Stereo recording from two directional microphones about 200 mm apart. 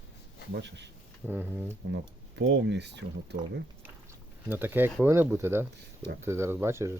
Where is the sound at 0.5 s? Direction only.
60° right (ahead or behind).